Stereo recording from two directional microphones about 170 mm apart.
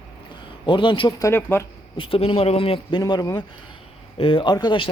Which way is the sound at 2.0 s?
35° left (ahead or behind).